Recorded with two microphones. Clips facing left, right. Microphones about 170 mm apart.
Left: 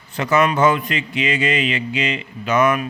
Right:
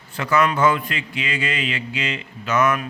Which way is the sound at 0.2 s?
20° left (ahead or behind).